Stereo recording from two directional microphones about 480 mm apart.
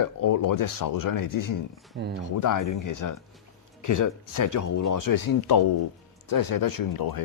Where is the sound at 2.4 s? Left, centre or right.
Left.